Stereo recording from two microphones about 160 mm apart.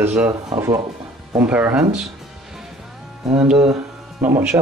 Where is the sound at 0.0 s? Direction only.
10° right (ahead or behind).